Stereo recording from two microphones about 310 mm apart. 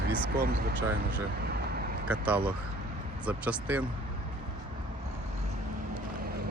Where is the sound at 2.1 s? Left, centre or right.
Centre.